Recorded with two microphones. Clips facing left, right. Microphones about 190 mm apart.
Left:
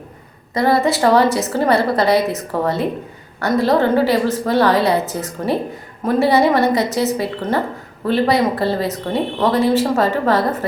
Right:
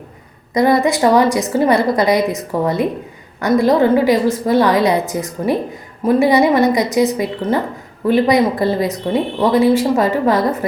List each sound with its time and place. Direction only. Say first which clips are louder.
0.5 s a woman's voice: right 2 dB; 15° right (ahead or behind)